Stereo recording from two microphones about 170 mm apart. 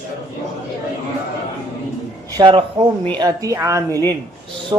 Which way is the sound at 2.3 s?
30° right (ahead or behind).